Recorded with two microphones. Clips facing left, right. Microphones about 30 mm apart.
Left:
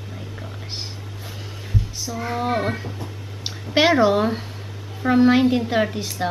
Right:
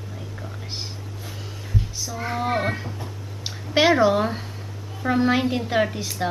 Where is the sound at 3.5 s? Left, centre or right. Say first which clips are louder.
Left 1 dB; centre.